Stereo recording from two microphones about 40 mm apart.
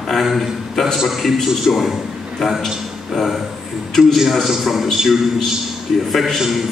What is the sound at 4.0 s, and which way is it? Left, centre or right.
A man's voice, centre.